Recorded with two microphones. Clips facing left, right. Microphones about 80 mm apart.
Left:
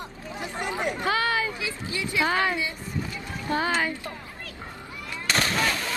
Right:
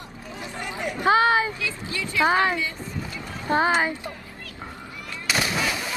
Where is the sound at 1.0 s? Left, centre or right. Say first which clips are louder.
Right 9 dB; right.